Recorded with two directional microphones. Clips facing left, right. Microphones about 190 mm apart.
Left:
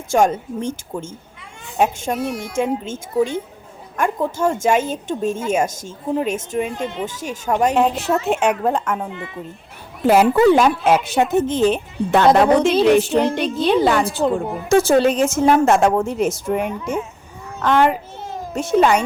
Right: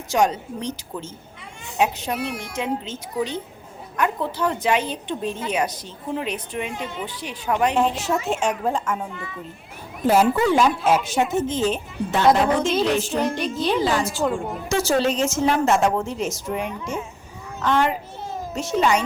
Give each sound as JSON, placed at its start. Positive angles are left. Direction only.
{"t": 0.1, "sound": "a woman's voice", "side_deg": 50}
{"t": 7.9, "sound": "speech", "side_deg": 60}
{"t": 10.1, "sound": "speech", "side_deg": 65}